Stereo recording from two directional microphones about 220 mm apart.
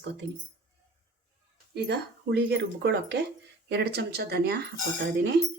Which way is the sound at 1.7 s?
50° right (ahead or behind).